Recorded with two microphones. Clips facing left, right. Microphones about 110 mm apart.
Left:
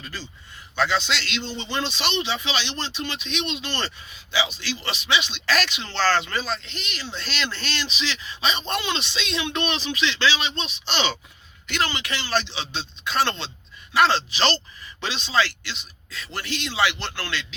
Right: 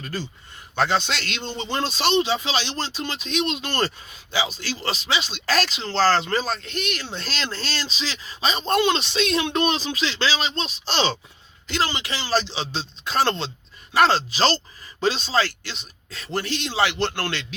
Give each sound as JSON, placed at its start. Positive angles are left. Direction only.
{"t": 0.0, "sound": "a man's voice", "side_deg": -45}
{"t": 12.4, "sound": "a man's voice", "side_deg": -40}